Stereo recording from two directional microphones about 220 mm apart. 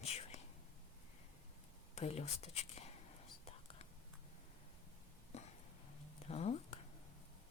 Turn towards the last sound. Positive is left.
turn(degrees=30)  # may be behind; listen again after turning